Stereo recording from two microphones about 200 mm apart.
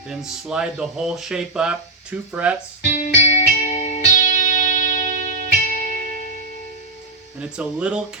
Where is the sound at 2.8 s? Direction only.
35° left (ahead or behind).